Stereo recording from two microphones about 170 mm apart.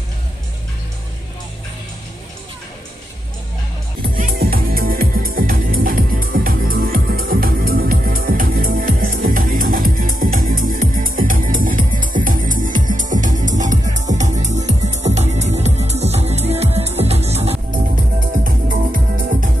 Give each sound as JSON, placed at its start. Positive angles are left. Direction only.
{"t": 4.1, "sound": "music", "side_deg": -55}
{"t": 18.4, "sound": "music", "side_deg": -55}